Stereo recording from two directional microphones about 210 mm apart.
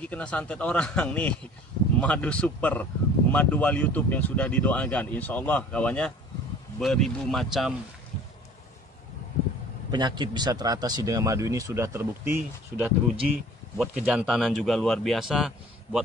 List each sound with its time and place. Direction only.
0.0 s a man's voice: 5° left (ahead or behind)
9.8 s speech: 20° right (ahead or behind); by 16.0 s centre (ahead or behind)